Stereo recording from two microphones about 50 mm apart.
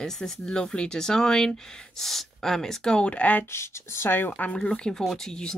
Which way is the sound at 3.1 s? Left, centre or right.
Left.